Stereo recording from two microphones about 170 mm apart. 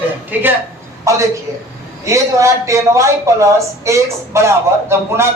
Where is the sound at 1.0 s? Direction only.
20° right (ahead or behind).